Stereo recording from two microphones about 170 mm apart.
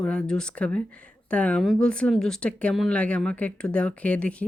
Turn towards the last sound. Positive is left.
turn(degrees=10)  # may be behind; listen again after turning